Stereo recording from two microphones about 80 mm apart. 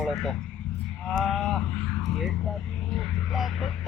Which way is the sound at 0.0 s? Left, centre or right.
Centre.